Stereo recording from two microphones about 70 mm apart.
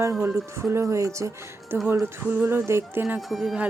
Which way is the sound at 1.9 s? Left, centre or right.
Right.